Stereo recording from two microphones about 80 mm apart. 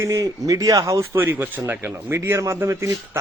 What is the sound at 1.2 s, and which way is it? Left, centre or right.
Speech, right.